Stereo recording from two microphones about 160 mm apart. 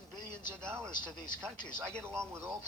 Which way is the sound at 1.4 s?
5° left (ahead or behind).